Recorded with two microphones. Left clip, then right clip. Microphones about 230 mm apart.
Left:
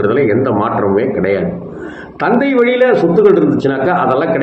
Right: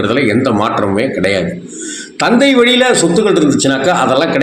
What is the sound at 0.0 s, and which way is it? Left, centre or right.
A man's voice, right.